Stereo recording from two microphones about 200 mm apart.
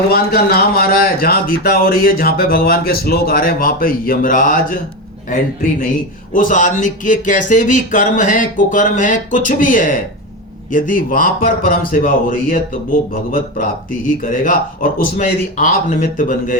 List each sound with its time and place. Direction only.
0.1 s speech: 50° left (ahead or behind)
6.3 s speech: 40° left (ahead or behind)